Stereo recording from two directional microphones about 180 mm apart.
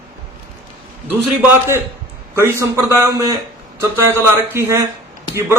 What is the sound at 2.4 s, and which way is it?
A man's voice, 15° right (ahead or behind).